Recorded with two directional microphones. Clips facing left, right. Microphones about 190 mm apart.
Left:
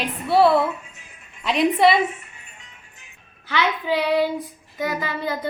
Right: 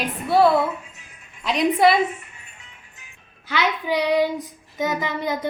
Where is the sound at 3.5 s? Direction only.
15° right (ahead or behind).